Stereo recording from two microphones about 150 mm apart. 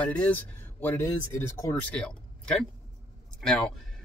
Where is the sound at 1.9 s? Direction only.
5° left (ahead or behind).